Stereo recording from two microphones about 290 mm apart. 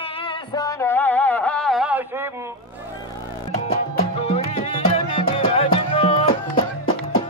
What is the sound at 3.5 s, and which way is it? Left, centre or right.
Music, left.